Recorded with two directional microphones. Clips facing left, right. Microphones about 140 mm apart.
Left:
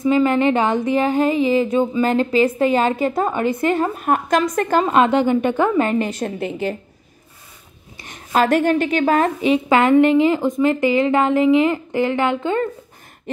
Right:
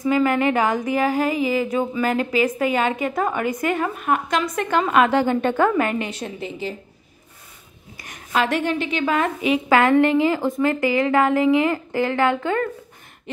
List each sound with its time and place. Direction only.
0.0 s speech: 25° left (ahead or behind)
5.8 s speech: 30° left (ahead or behind)
6.0 s a woman's voice: 45° left (ahead or behind)
8.0 s speech: 30° left (ahead or behind)